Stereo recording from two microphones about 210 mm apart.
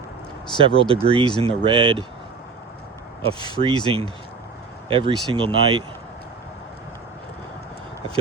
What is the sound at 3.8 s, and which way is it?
Speech, 25° right (ahead or behind).